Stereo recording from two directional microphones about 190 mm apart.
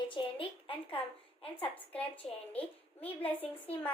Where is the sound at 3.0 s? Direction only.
30° left (ahead or behind).